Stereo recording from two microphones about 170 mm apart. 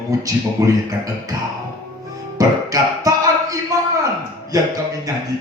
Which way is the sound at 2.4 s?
20° right (ahead or behind).